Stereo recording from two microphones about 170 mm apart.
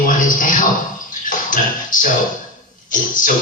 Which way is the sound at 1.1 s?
50° left (ahead or behind).